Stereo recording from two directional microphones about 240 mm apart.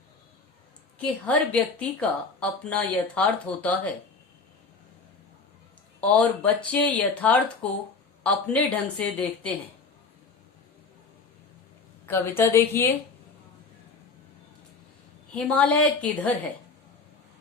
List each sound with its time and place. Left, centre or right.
0.9 s a woman's voice: centre
6.0 s a woman's voice: centre
12.0 s a woman's voice: centre
15.4 s a woman's voice: centre